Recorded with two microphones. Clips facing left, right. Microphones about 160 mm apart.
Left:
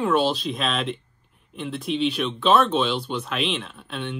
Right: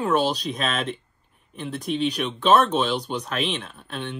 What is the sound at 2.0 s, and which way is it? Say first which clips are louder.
Speech: even; 40° right (ahead or behind).